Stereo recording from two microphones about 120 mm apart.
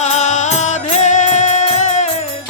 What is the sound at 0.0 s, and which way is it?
Music, 80° left.